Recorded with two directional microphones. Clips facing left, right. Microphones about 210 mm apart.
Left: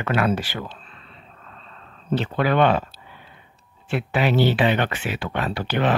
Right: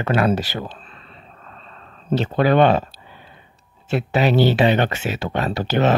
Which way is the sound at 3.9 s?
40° right (ahead or behind).